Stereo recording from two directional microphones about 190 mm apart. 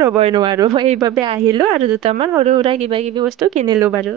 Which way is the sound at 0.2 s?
25° right (ahead or behind).